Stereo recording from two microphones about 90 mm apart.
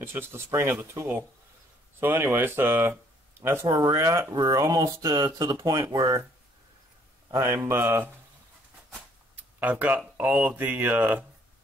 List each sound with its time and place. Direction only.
0.0 s speech: 25° right (ahead or behind)
3.6 s speech: 40° right (ahead or behind)
7.2 s speech: 35° right (ahead or behind)
9.3 s speech: 15° right (ahead or behind)